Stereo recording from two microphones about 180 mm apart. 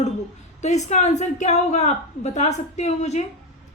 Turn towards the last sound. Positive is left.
turn(degrees=40)  # may be behind; listen again after turning